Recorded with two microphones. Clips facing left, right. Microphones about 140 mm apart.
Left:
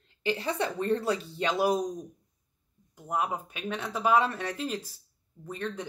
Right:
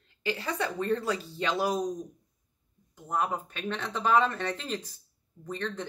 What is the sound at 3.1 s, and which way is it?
Speech, 10° left (ahead or behind).